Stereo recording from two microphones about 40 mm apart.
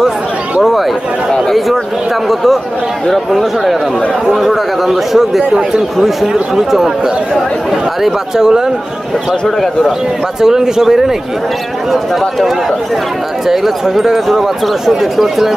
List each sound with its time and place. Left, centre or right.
0.6 s a sound: centre
2.2 s speech: centre
6.2 s speech: centre
8.0 s speech: centre
10.4 s speech: centre
11.9 s speech: centre